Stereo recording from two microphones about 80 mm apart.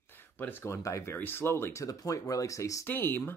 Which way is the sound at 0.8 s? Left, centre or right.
Left.